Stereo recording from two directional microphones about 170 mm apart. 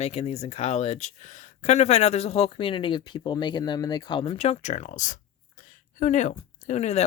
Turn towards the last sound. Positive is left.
turn(degrees=40)  # may be behind; listen again after turning